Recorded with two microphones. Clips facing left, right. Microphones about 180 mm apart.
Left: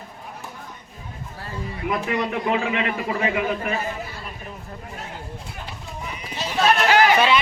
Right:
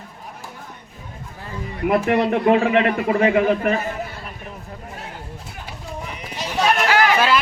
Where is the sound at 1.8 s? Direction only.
60° right (ahead or behind).